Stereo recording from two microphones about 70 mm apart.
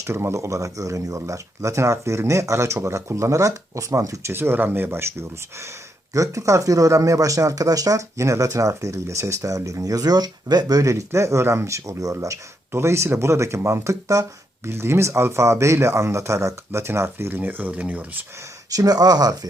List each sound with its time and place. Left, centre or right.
0.0 s speech: right
0.3 s speech: right
4.3 s speech: right
6.1 s speech: right
18.7 s speech: right